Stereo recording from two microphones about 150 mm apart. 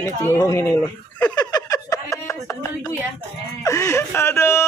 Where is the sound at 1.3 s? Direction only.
25° left (ahead or behind).